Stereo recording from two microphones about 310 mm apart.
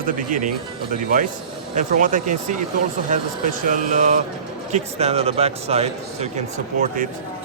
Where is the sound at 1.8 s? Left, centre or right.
Right.